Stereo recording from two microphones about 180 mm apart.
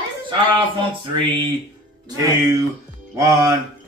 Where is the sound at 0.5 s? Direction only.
25° right (ahead or behind).